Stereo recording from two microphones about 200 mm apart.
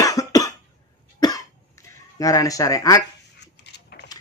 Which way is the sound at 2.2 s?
15° left (ahead or behind).